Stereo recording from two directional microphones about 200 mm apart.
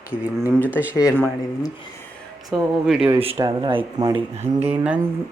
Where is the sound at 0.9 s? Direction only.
15° left (ahead or behind).